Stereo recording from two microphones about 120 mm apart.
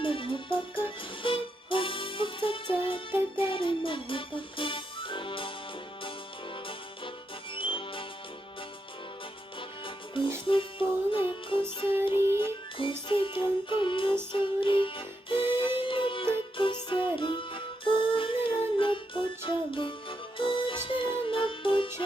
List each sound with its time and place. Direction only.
0.0 s music: 45° left (ahead or behind)
7.5 s music: 45° left (ahead or behind)
9.6 s music: 45° left (ahead or behind)